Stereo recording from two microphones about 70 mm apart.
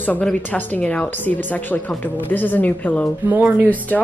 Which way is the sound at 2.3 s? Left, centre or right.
Left.